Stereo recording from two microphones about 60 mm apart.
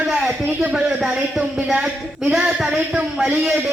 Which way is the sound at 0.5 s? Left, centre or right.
Centre.